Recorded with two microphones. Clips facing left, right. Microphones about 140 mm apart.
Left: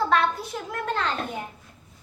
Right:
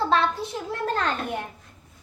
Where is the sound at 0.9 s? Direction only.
45° right (ahead or behind).